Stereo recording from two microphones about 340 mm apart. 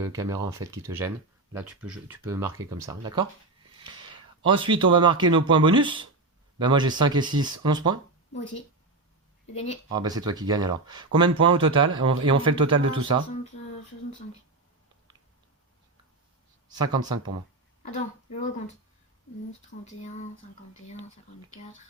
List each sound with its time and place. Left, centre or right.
0.0 s speech: centre
9.9 s speech: centre
16.6 s speech: centre
17.9 s a woman's voice: centre
19.8 s a woman's voice: centre